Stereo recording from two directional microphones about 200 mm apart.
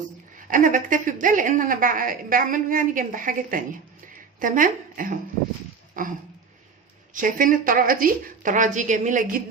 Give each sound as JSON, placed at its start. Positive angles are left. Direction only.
{"t": 0.3, "sound": "a woman's voice", "side_deg": -40}
{"t": 6.0, "sound": "dog", "side_deg": -45}
{"t": 7.1, "sound": "a woman's voice", "side_deg": -40}